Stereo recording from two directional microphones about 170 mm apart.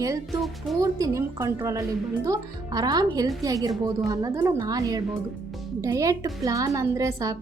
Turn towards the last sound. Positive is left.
turn(degrees=-20)  # may be behind; listen again after turning